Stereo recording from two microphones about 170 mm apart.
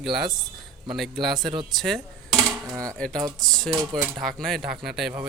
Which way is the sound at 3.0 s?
5° left (ahead or behind).